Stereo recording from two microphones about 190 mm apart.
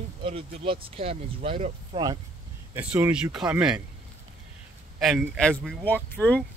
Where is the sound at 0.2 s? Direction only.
30° right (ahead or behind).